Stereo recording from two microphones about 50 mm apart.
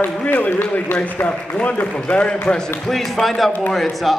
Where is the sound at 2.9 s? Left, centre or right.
Centre.